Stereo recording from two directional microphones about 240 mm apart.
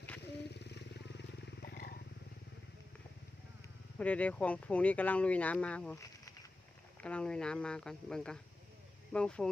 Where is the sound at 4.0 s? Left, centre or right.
Centre.